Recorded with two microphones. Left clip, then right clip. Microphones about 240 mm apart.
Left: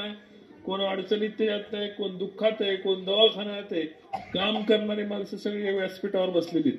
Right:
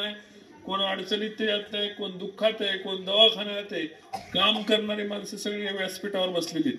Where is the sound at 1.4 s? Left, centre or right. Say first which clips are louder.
Right 1 dB; right.